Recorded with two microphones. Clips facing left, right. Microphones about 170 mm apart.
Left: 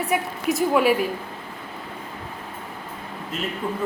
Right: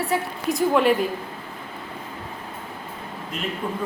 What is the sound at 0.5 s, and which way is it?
Speech, 5° left (ahead or behind).